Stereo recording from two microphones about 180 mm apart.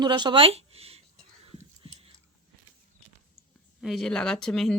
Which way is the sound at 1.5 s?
30° right (ahead or behind).